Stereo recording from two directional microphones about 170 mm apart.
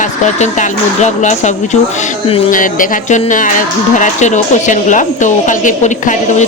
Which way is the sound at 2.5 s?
50° left (ahead or behind).